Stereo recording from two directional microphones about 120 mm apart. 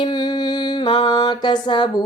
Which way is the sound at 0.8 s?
40° left (ahead or behind).